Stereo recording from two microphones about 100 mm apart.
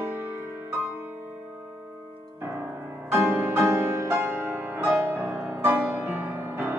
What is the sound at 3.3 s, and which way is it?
Music, 25° right (ahead or behind).